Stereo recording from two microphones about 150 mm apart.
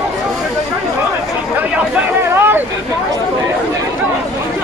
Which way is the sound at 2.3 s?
15° right (ahead or behind).